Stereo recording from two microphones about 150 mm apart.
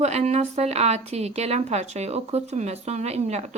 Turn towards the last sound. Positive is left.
turn(degrees=-45)  # may be behind; listen again after turning